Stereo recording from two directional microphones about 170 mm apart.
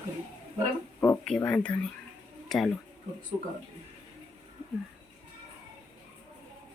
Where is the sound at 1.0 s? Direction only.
10° left (ahead or behind).